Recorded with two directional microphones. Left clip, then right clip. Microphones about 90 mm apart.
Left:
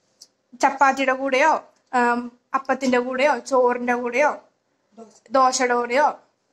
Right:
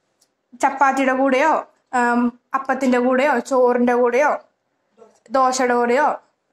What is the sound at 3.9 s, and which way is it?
Speech, 25° right (ahead or behind).